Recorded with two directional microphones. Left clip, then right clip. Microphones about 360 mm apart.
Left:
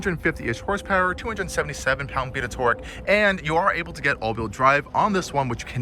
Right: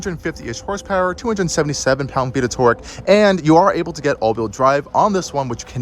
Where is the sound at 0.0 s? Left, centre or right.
Centre.